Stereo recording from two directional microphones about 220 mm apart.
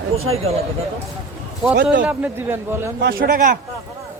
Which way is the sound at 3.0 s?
45° right (ahead or behind).